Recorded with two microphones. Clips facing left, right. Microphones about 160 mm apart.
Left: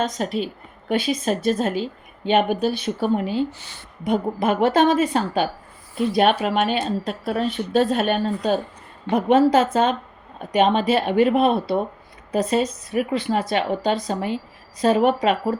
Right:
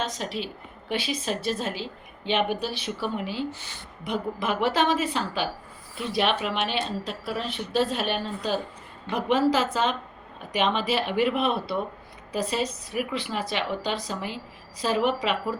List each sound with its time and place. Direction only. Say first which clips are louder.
0.0 s a woman's voice: left 7 dB; 45° left (ahead or behind)